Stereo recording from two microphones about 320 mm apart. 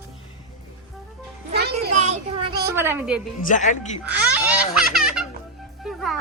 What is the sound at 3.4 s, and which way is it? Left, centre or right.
Speech, left.